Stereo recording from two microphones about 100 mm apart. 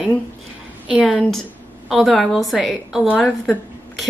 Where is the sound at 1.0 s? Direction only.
Centre (ahead or behind).